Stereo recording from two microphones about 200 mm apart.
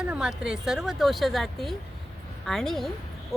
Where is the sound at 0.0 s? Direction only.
5° right (ahead or behind).